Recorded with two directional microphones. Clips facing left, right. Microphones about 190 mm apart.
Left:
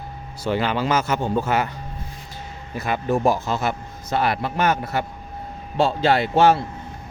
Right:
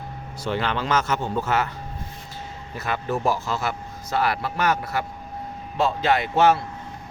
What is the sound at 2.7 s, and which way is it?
Speech, 15° left (ahead or behind).